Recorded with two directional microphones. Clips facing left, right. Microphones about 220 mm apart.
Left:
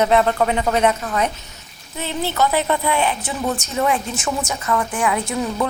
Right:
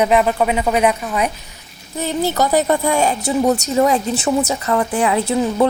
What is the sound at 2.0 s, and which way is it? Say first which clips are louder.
A woman's voice: right 3 dB; 40° right (ahead or behind).